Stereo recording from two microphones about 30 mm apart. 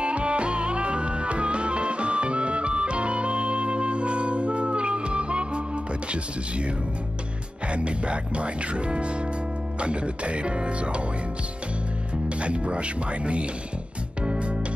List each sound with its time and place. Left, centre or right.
0.0 s music: right
7.7 s speech: right
12.4 s speech: right
14.2 s music: right